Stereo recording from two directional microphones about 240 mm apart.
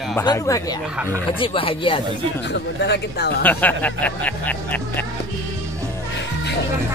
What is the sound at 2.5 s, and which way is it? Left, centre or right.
Speech, left.